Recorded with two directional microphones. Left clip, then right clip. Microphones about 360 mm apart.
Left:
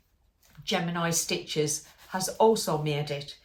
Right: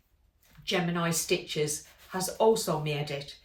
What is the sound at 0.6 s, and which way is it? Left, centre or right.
Speech, centre.